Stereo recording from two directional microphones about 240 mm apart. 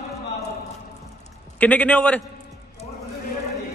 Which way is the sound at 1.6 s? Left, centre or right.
Centre.